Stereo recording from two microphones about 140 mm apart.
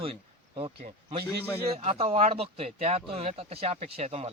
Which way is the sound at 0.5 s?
40° right (ahead or behind).